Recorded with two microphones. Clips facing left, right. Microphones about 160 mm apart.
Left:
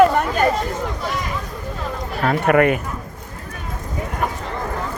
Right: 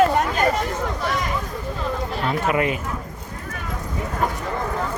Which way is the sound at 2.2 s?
60° left (ahead or behind).